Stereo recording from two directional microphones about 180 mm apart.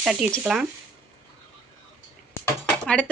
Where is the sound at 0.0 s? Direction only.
5° right (ahead or behind).